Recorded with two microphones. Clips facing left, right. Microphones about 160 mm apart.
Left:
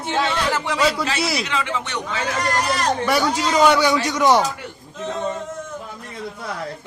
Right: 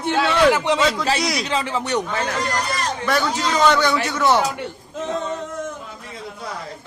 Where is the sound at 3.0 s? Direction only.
10° left (ahead or behind).